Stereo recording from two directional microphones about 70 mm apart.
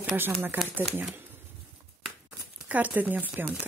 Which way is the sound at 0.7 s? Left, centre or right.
Centre.